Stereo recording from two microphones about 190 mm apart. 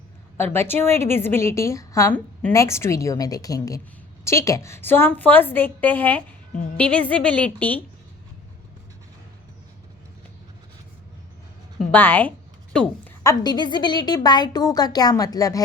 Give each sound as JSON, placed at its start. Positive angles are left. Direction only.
{"t": 0.3, "sound": "a woman's voice", "side_deg": 10}
{"t": 11.9, "sound": "a woman's voice", "side_deg": 10}
{"t": 13.2, "sound": "a woman's voice", "side_deg": 20}